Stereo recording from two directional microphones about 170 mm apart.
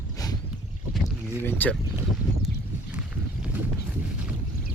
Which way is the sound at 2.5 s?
90° left.